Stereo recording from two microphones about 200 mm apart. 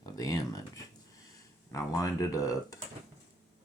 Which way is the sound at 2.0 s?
15° left (ahead or behind).